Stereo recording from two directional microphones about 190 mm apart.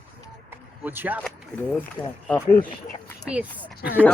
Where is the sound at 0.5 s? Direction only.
10° right (ahead or behind).